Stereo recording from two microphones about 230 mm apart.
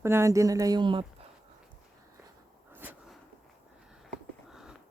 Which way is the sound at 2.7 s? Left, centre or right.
Centre.